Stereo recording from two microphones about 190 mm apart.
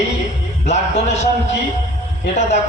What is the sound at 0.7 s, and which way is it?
Speech, 35° left (ahead or behind).